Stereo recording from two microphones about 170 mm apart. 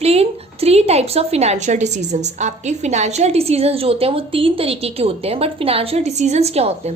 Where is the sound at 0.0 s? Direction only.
35° right (ahead or behind).